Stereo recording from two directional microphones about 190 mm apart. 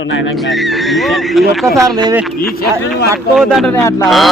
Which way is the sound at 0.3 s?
Centre (ahead or behind).